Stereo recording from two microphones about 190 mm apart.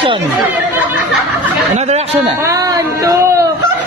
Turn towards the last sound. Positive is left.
turn(degrees=-15)  # may be behind; listen again after turning